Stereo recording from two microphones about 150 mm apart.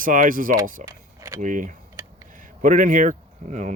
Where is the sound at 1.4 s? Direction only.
55° right (ahead or behind).